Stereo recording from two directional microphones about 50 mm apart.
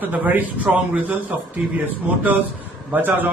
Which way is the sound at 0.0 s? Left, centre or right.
Right.